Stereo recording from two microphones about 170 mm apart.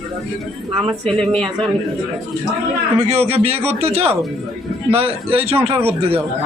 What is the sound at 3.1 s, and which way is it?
A man's voice, 40° right (ahead or behind).